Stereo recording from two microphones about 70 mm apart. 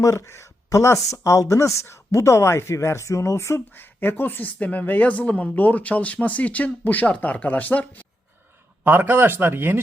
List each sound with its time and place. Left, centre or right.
0.0 s speech: left
8.8 s speech: right